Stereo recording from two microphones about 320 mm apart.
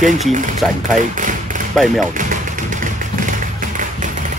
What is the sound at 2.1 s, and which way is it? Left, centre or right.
Music, right.